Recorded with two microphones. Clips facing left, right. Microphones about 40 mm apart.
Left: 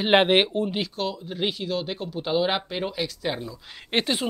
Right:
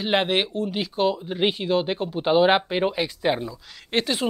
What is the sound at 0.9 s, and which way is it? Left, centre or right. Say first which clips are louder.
Speech: right 6 dB; right.